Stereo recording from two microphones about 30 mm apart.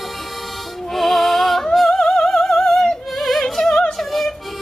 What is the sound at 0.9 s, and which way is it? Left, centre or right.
Music, centre.